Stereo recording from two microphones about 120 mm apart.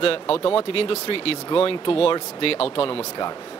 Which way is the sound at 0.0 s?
50° left (ahead or behind).